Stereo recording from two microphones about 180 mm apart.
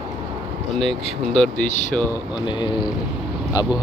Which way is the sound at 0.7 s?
Centre (ahead or behind).